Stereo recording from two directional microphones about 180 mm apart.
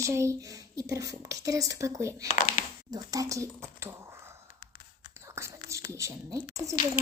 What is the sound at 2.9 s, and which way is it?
A woman's voice, 20° right (ahead or behind).